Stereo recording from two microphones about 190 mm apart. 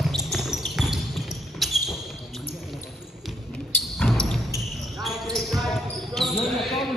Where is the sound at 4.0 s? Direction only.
Centre (ahead or behind).